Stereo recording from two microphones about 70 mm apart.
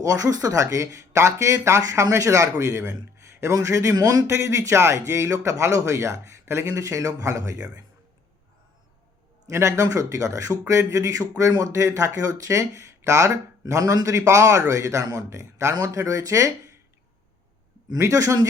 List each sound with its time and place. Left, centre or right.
0.0 s speech: right
3.9 s speech: right
4.3 s speech: right
9.5 s speech: right
9.8 s speech: right
17.9 s speech: right